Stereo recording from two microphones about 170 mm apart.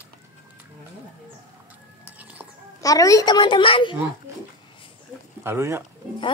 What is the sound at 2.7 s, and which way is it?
A child's voice, 20° left (ahead or behind).